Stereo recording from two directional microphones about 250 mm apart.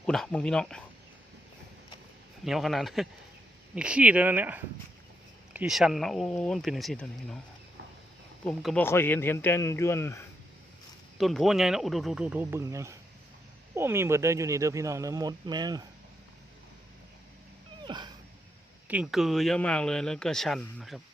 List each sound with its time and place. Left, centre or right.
0.0 s speech: centre
2.4 s speech: centre
8.4 s speech: centre
11.2 s speech: centre
17.8 s dog: centre
18.9 s speech: centre